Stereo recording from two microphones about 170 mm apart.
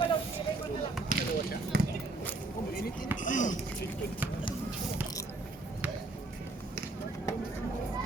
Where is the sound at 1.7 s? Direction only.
65° right (ahead or behind).